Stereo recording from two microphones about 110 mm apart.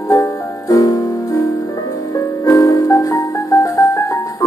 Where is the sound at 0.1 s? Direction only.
30° left (ahead or behind).